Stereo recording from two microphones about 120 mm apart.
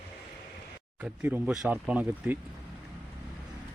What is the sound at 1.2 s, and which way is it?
Speech, 10° right (ahead or behind).